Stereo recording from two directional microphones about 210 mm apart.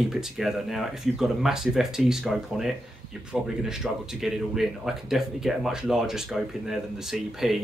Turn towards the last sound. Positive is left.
turn(degrees=0)  # may be behind; listen again after turning